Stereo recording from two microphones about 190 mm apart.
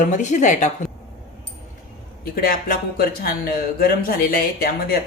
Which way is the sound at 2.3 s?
50° left (ahead or behind).